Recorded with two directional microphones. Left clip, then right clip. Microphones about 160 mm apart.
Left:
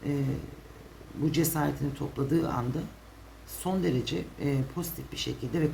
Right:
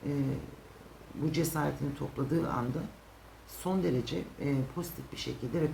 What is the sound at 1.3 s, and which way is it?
Speech, 45° left (ahead or behind).